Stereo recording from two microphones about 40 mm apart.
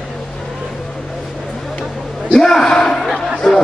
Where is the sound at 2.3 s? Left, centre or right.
Centre.